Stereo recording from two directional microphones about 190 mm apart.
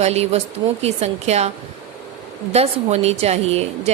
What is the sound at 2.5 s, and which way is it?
Speech, 35° right (ahead or behind).